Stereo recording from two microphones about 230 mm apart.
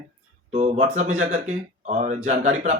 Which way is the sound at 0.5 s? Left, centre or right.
Right.